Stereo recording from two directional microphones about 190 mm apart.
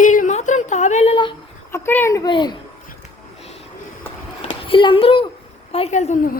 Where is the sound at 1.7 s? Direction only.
10° left (ahead or behind).